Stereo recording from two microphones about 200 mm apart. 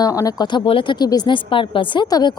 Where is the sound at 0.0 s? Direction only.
15° left (ahead or behind).